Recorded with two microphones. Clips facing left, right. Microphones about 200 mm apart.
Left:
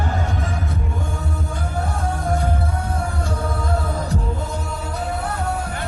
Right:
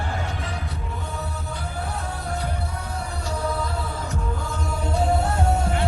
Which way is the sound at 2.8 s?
50° left (ahead or behind).